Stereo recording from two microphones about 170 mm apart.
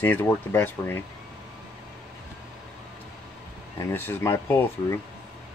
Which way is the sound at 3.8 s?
10° left (ahead or behind).